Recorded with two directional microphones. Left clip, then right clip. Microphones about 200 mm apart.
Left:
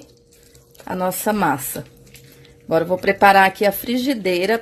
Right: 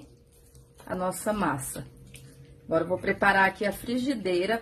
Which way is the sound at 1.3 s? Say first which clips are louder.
Left 8 dB; 40° left (ahead or behind).